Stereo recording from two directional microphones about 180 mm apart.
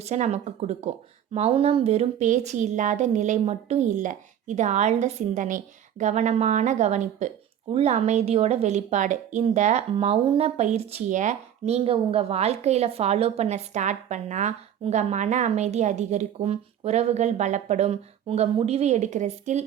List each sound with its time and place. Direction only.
0.0 s a woman's voice: 40° right (ahead or behind)